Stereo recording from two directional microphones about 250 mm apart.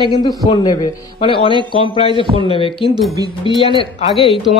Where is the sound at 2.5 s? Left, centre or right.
Left.